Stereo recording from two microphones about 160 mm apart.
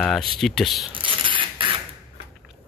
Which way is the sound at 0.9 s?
30° right (ahead or behind).